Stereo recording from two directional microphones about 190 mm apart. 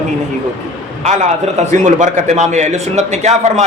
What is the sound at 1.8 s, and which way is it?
A man's voice, 35° right (ahead or behind).